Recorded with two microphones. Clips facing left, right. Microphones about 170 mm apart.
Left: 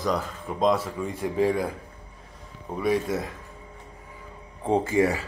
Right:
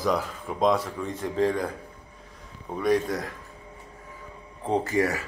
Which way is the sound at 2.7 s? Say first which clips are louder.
Right 1 dB; 5° left (ahead or behind).